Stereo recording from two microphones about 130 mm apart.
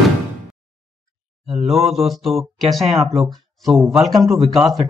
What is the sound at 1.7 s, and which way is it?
Speech, centre (ahead or behind).